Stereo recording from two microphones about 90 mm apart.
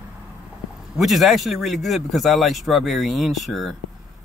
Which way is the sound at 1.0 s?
Centre (ahead or behind).